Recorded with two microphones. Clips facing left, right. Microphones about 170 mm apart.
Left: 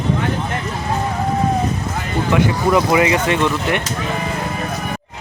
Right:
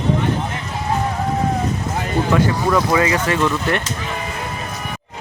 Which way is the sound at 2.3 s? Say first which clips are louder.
Left 3 dB; 15° left (ahead or behind).